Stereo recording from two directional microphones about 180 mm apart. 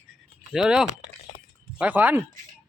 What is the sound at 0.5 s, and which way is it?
Speech, 5° right (ahead or behind).